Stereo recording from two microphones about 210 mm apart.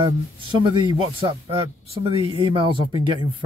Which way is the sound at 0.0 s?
25° right (ahead or behind).